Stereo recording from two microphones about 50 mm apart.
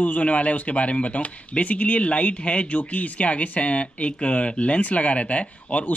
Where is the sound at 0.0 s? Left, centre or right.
Left.